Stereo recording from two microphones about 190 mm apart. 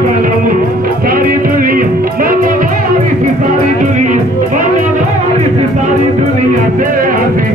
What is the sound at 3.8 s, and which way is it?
Music, 40° right (ahead or behind).